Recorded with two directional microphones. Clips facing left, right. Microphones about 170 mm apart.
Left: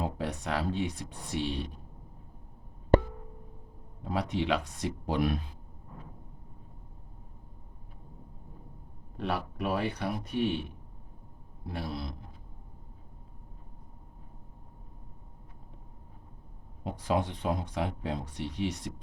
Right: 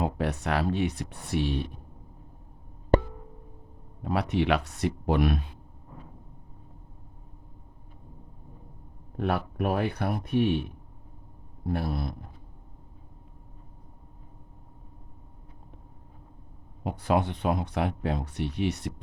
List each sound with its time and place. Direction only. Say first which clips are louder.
0.0 s speech: right 5 dB; 65° right (ahead or behind)
4.0 s speech: right 4 dB; 65° right (ahead or behind)
9.1 s speech: right 5 dB; 55° right (ahead or behind)
11.6 s speech: right 6 dB; 55° right (ahead or behind)
16.8 s speech: right 4 dB; 65° right (ahead or behind)